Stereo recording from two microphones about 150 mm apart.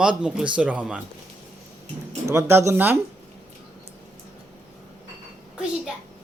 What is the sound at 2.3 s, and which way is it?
Speech, 15° right (ahead or behind).